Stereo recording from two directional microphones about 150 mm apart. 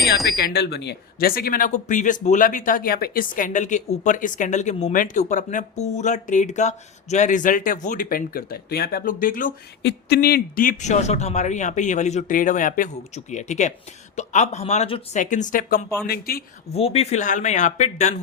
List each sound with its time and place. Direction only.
0.0 s speech: centre (ahead or behind)
0.4 s speech: 90° left; by 9.5 s 65° left (ahead or behind)
10.1 s speech: 90° left; by 15.0 s 40° left (ahead or behind)
15.1 s speech: 55° left (ahead or behind)
16.0 s speech: 85° left
16.7 s speech: 40° left (ahead or behind)